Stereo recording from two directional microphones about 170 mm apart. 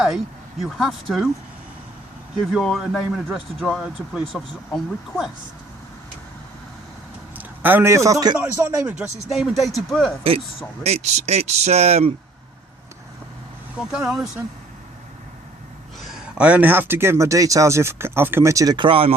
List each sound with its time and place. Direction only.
0.6 s speech: centre (ahead or behind)
2.5 s speech: centre (ahead or behind)
7.3 s a man's voice: 10° right (ahead or behind)
8.4 s speech: 10° right (ahead or behind)
10.8 s speech: 40° right (ahead or behind)
13.7 s speech: 5° right (ahead or behind)
16.0 s speech: centre (ahead or behind); by 19.1 s 30° right (ahead or behind)